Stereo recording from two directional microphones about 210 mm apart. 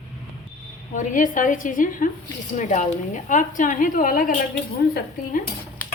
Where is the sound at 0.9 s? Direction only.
35° left (ahead or behind).